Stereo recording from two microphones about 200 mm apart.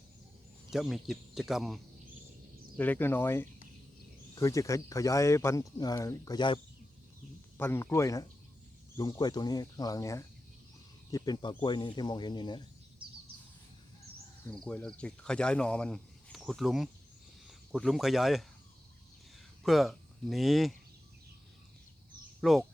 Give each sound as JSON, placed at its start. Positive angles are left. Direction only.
{"t": 0.7, "sound": "speech", "side_deg": 0}
{"t": 7.6, "sound": "speech", "side_deg": 10}
{"t": 14.5, "sound": "speech", "side_deg": 5}
{"t": 19.6, "sound": "speech", "side_deg": 0}
{"t": 22.4, "sound": "speech", "side_deg": 0}